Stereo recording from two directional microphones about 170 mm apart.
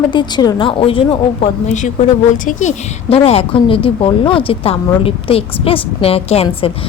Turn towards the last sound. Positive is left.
turn(degrees=35)  # may be behind; listen again after turning